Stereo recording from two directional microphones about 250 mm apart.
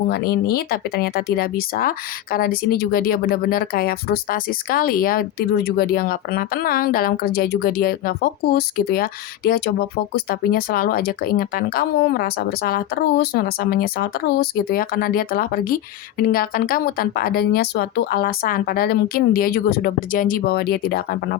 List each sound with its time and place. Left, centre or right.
0.1 s speech: left